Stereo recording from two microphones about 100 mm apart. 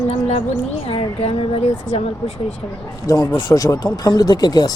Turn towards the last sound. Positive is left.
turn(degrees=45)  # may be behind; listen again after turning